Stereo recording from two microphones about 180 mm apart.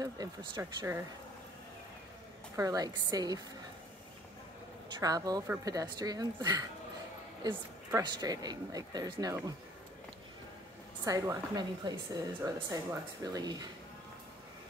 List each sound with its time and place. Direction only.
0.0 s speech: 20° right (ahead or behind)
2.5 s speech: 20° right (ahead or behind)
5.0 s speech: 20° right (ahead or behind)
11.1 s speech: 20° right (ahead or behind)